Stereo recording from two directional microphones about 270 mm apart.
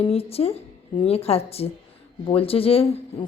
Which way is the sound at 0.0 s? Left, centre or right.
Left.